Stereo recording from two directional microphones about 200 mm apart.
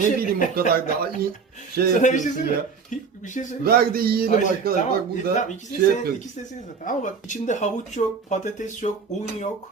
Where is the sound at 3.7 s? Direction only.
50° right (ahead or behind).